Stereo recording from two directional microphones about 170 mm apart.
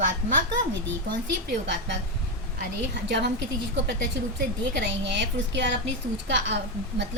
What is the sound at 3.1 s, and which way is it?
Speech, 90° right.